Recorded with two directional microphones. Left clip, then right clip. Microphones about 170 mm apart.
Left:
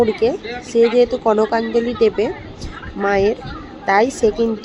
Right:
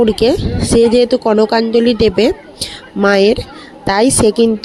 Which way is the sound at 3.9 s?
75° right (ahead or behind).